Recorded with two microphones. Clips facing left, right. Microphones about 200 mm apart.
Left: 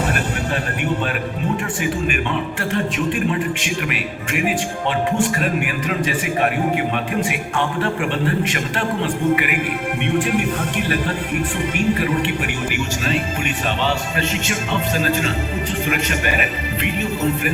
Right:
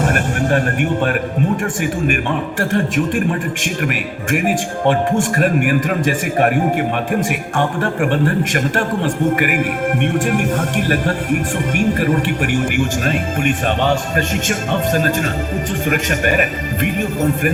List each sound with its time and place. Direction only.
0.0 s music: 50° right (ahead or behind)
1.8 s a man's voice: 50° right (ahead or behind)